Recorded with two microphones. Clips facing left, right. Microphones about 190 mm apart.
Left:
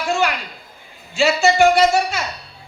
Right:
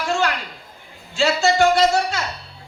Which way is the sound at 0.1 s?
10° left (ahead or behind).